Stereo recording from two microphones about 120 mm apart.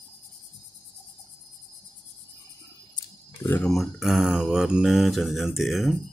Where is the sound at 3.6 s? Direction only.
Centre (ahead or behind).